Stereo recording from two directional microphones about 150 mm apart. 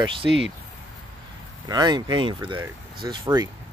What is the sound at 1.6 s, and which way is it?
Speech, 30° right (ahead or behind).